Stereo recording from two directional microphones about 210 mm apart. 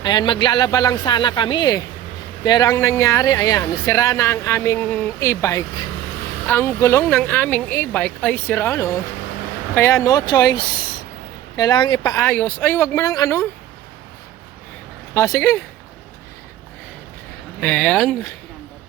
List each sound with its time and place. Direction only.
0.0 s speech: 20° left (ahead or behind)
15.1 s speech: 15° left (ahead or behind)
17.6 s speech: 5° left (ahead or behind)